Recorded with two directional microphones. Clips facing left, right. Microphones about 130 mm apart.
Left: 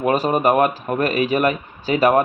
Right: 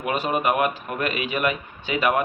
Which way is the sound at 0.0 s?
40° left (ahead or behind).